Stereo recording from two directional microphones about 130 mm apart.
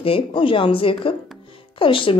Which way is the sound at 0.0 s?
45° left (ahead or behind).